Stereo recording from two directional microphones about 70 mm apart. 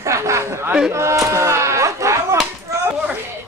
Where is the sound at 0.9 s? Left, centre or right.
Right.